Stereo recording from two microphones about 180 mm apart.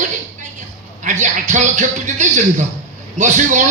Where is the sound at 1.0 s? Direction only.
40° right (ahead or behind).